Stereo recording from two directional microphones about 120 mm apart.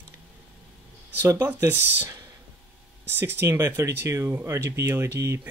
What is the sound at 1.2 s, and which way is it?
Speech, 25° right (ahead or behind).